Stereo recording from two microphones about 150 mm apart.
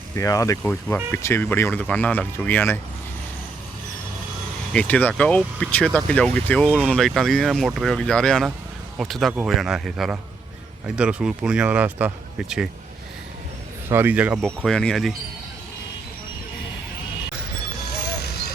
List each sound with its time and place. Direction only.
0.2 s speech: 20° left (ahead or behind)
4.7 s speech: 10° left (ahead or behind)
13.9 s speech: 10° right (ahead or behind)
14.4 s speech: 5° left (ahead or behind)
18.2 s vehicle: 90° left